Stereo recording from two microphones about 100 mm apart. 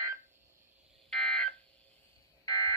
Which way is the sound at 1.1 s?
5° left (ahead or behind).